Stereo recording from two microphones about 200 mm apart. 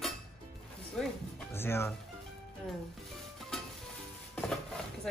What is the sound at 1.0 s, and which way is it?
Speech, 5° left (ahead or behind).